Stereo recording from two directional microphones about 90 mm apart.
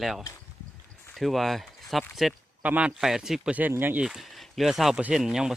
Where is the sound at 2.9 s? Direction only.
5° right (ahead or behind).